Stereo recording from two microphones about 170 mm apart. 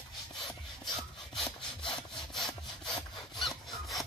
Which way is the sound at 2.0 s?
Centre (ahead or behind).